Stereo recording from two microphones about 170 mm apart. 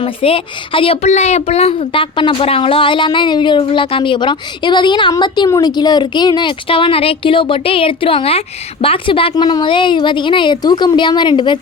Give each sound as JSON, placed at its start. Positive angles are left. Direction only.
{"t": 0.0, "sound": "speech", "side_deg": 30}